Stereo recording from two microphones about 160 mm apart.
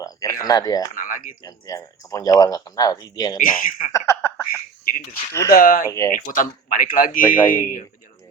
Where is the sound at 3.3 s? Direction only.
60° left (ahead or behind).